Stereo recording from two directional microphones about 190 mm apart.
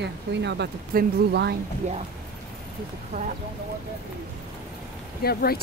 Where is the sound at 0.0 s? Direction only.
65° right (ahead or behind).